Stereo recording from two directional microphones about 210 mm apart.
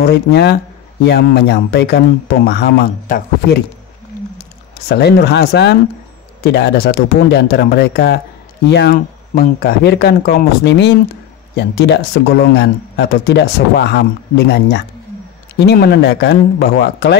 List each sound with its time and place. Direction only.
0.0 s speech: 50° left (ahead or behind)
4.8 s speech: 50° left (ahead or behind)